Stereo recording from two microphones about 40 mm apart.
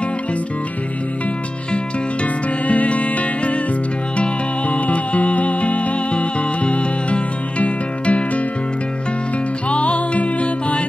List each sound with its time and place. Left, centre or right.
2.7 s music: left
9.7 s music: left